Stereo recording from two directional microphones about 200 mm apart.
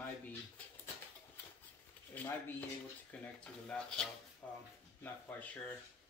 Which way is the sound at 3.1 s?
5° left (ahead or behind).